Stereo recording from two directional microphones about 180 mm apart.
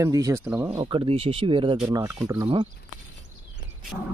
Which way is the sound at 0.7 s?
30° right (ahead or behind).